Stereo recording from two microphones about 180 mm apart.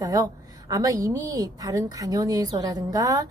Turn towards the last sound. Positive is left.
turn(degrees=-20)  # may be behind; listen again after turning